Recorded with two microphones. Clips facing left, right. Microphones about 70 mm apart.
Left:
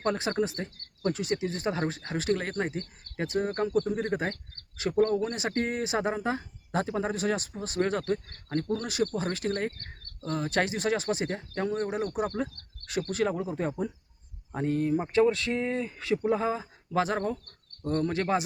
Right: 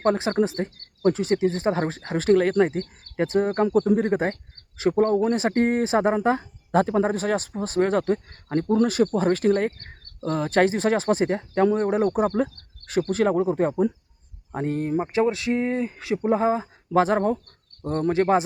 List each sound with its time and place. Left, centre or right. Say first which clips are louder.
0.0 s speech: right 7 dB; right
8.7 s speech: right 11 dB; right
9.7 s cricket: right 1 dB; right
10.2 s speech: right 6 dB; right
10.5 s speech: right 8 dB; right
11.8 s speech: right 8 dB; right
15.0 s speech: right 1 dB; centre